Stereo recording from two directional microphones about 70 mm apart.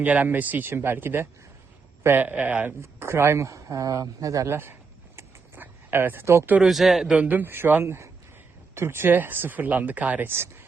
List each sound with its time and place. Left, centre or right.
0.0 s speech: right
2.8 s speech: right
5.5 s a sound: right
6.2 s speech: right
6.6 s speech: centre
7.1 s speech: right
10.3 s speech: right